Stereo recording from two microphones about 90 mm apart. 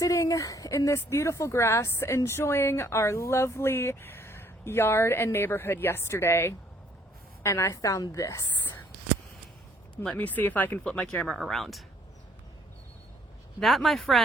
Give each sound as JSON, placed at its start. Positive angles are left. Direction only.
{"t": 0.0, "sound": "a woman's voice", "side_deg": 40}
{"t": 9.9, "sound": "a woman's voice", "side_deg": 10}
{"t": 13.6, "sound": "speech", "side_deg": 0}